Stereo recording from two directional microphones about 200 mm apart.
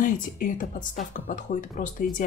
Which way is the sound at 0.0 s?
40° left (ahead or behind).